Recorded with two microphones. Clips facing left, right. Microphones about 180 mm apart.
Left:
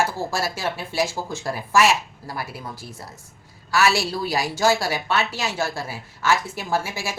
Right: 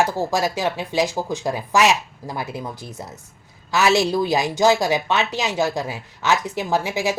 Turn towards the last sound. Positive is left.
turn(degrees=-20)  # may be behind; listen again after turning